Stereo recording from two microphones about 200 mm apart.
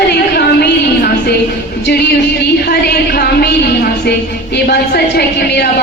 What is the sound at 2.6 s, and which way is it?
Speech, 50° left (ahead or behind).